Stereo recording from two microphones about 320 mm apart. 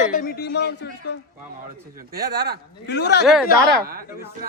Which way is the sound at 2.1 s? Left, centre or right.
Right.